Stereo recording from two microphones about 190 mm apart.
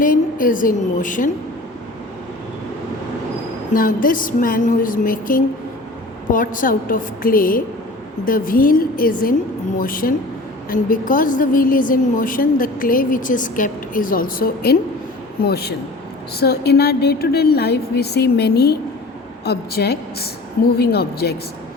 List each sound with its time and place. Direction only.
0.0 s a woman's voice: 45° left (ahead or behind)
3.7 s a woman's voice: 45° left (ahead or behind)